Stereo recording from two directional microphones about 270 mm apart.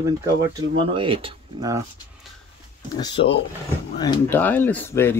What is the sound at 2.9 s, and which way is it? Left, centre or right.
Speech, centre.